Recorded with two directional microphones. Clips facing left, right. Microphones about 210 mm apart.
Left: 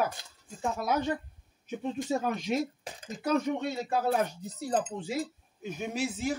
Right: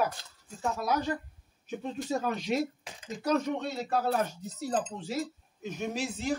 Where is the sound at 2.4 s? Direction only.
40° left (ahead or behind).